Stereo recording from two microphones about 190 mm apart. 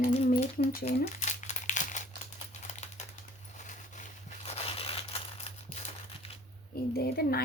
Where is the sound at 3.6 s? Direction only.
40° left (ahead or behind).